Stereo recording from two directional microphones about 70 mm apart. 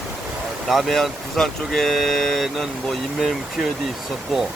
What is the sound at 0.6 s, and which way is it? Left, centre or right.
Speech, centre.